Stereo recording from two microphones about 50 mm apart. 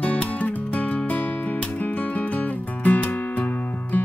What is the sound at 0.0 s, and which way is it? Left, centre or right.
Music, left.